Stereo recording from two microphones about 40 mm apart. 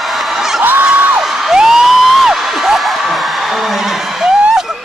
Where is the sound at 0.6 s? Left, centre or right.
Right.